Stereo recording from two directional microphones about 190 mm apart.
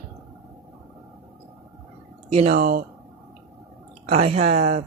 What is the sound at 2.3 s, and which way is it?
Speech, 35° right (ahead or behind).